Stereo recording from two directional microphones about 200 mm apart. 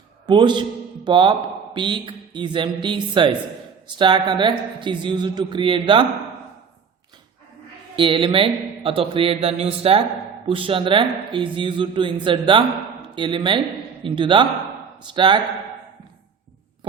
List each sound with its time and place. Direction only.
0.3 s speech: 20° right (ahead or behind)
7.9 s speech: 25° right (ahead or behind)